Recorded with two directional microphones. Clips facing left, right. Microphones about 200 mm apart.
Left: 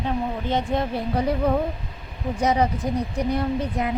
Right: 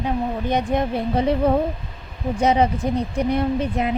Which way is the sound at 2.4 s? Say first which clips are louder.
Right 3 dB; 25° right (ahead or behind).